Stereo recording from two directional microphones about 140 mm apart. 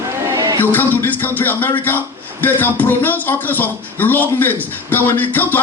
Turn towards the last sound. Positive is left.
turn(degrees=10)  # may be behind; listen again after turning